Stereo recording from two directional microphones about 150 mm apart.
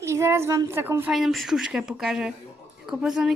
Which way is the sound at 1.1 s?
Centre (ahead or behind).